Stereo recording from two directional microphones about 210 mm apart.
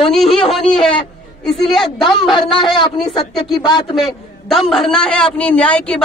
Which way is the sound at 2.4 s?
25° left (ahead or behind).